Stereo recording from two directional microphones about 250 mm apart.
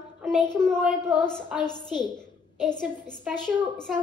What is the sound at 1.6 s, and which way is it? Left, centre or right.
Speech, centre.